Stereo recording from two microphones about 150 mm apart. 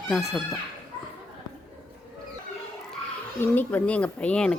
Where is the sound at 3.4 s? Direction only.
10° left (ahead or behind).